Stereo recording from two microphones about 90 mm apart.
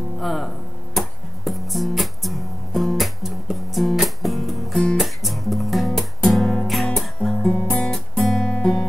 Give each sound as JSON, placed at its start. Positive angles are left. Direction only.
{"t": 0.2, "sound": "speech", "side_deg": 0}
{"t": 0.9, "sound": "music", "side_deg": 0}